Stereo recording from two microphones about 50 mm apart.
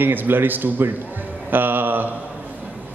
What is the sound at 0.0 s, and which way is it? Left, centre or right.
A man's voice, right.